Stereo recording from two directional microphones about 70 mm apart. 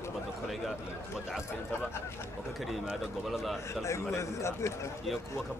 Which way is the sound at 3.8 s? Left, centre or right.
Left.